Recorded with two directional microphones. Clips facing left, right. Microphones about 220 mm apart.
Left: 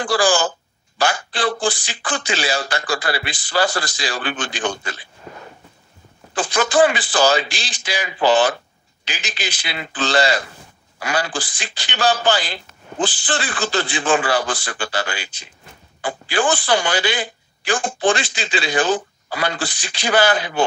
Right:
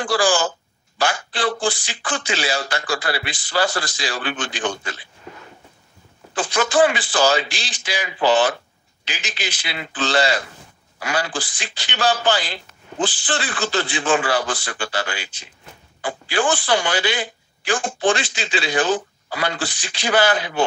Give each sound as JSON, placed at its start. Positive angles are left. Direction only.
{"t": 0.0, "sound": "speech", "side_deg": 35}
{"t": 6.3, "sound": "speech", "side_deg": 35}